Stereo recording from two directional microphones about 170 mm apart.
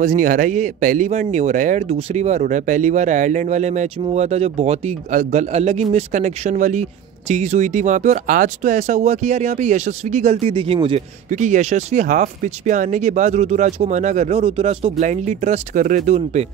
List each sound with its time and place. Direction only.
0.0 s a man's voice: 50° right (ahead or behind); by 11.0 s 30° right (ahead or behind)
11.2 s a man's voice: 45° right (ahead or behind)